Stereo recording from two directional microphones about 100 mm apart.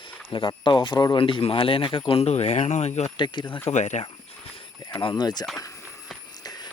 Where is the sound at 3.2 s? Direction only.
50° left (ahead or behind).